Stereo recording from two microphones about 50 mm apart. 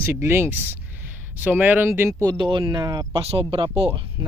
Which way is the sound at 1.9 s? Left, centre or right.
Right.